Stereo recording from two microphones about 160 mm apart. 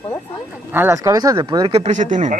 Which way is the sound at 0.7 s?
15° right (ahead or behind).